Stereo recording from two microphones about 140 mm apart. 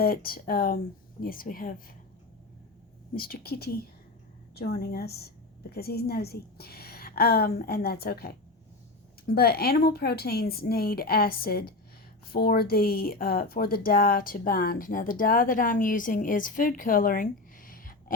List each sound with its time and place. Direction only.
0.0 s speech: 90° left
3.2 s speech: 90° left
4.7 s speech: 90° left